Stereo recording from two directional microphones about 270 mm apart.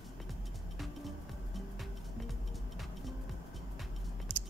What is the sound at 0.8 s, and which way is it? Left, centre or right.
Music, centre.